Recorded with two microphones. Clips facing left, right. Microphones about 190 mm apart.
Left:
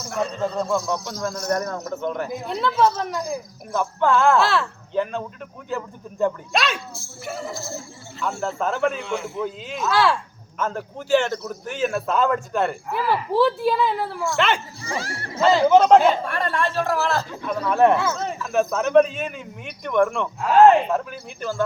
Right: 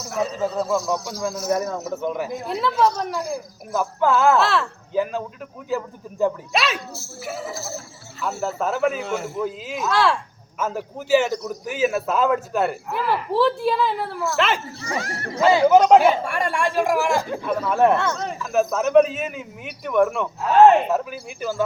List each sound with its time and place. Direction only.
0.0 s speech: centre (ahead or behind)
9.0 s a man's voice: 45° right (ahead or behind)
9.3 s speech: 5° right (ahead or behind)
14.9 s speech: 30° left (ahead or behind)
15.4 s speech: 10° right (ahead or behind)